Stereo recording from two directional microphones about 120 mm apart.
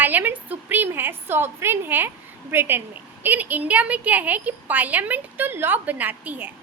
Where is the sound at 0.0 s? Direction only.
15° right (ahead or behind).